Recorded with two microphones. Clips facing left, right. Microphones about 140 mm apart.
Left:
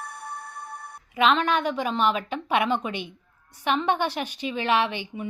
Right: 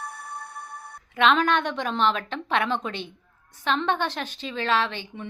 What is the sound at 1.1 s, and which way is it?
A woman's voice, centre (ahead or behind).